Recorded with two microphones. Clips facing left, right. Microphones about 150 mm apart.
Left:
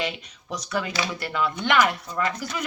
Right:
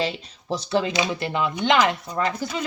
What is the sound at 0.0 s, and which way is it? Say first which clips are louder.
Speech: right 3 dB; 30° right (ahead or behind).